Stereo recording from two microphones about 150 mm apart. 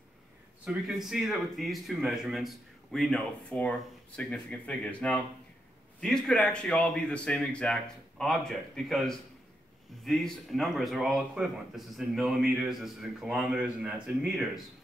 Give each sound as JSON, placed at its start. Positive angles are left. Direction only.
{"t": 0.7, "sound": "a man's voice", "side_deg": 0}